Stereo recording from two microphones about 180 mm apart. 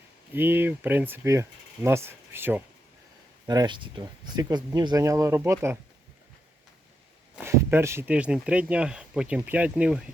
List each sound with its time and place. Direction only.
0.3 s speech: 10° right (ahead or behind)
3.4 s speech: 20° right (ahead or behind)
7.3 s speech: 15° right (ahead or behind)